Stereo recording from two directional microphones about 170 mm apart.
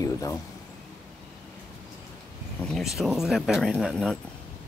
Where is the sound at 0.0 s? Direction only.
20° left (ahead or behind).